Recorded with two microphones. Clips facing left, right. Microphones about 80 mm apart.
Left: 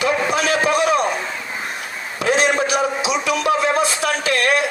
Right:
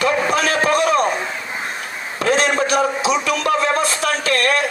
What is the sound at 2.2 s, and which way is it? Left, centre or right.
A man's voice, right.